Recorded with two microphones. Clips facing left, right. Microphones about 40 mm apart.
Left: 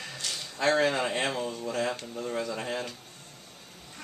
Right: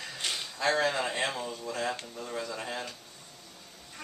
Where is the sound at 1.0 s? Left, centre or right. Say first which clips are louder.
Left 2 dB; centre.